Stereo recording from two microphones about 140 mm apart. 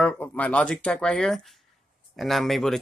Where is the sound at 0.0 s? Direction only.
10° left (ahead or behind).